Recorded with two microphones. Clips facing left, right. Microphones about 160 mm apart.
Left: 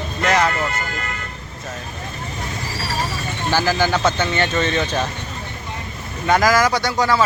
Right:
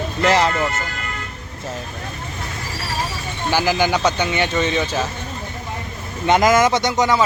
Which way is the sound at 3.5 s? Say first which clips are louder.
Right 1 dB; 15° right (ahead or behind).